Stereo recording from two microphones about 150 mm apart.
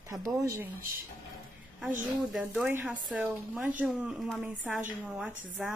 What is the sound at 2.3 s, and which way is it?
Speech, centre (ahead or behind).